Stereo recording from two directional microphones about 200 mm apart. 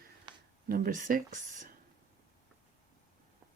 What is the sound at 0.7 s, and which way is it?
Speech, 45° right (ahead or behind).